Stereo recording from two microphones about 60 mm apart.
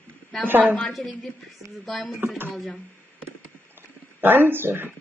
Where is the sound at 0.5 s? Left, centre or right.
Right.